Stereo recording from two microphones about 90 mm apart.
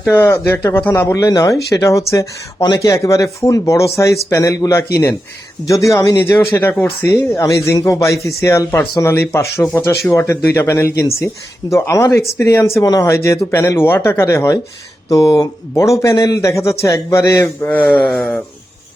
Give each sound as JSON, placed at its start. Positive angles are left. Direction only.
{"t": 0.1, "sound": "speech", "side_deg": 30}
{"t": 0.8, "sound": "speech", "side_deg": 20}
{"t": 1.0, "sound": "speech", "side_deg": 40}
{"t": 6.5, "sound": "speech", "side_deg": 25}
{"t": 12.8, "sound": "speech", "side_deg": 40}
{"t": 17.6, "sound": "speech", "side_deg": 15}